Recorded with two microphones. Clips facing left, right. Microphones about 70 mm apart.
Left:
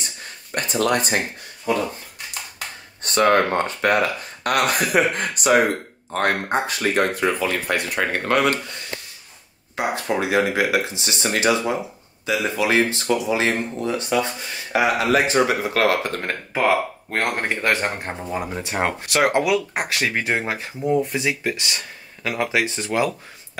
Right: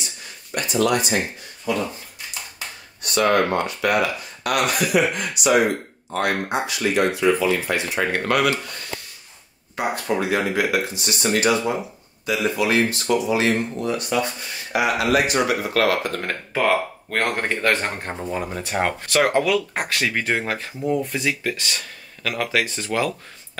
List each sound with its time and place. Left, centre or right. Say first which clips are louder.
0.6 s speech: right 1 dB; left
3.0 s speech: left 2 dB; left
8.1 s speech: left 1 dB; left
9.8 s speech: even; centre
16.2 s speech: even; centre